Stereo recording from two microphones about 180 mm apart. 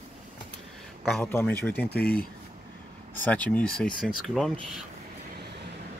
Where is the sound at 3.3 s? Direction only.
10° left (ahead or behind).